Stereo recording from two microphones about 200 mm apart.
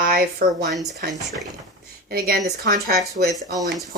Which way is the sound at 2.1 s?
50° right (ahead or behind).